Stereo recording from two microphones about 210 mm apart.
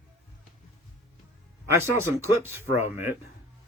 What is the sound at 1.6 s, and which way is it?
Speech, 10° right (ahead or behind).